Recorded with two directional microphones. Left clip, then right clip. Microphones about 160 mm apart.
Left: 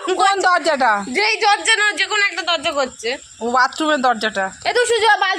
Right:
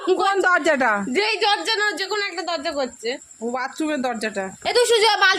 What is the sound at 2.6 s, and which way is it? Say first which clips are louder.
Speech: left 5 dB; 15° right (ahead or behind).